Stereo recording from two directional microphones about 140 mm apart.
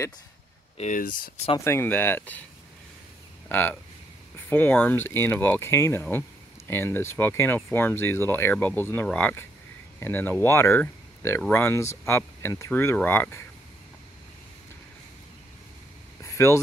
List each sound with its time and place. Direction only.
0.7 s speech: 65° left (ahead or behind)
1.6 s speech: 15° left (ahead or behind)
3.4 s speech: 15° left (ahead or behind)
16.2 s a sound: 20° left (ahead or behind)